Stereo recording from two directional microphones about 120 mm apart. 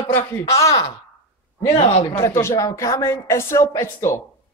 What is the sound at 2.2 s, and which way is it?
A man's voice, 25° left (ahead or behind).